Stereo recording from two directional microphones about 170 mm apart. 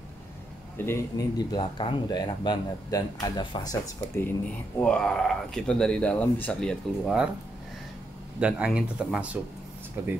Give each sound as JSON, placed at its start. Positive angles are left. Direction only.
{"t": 0.7, "sound": "a man's voice", "side_deg": 15}
{"t": 1.6, "sound": "speech", "side_deg": 30}
{"t": 4.7, "sound": "speech", "side_deg": 5}
{"t": 8.4, "sound": "speech", "side_deg": -5}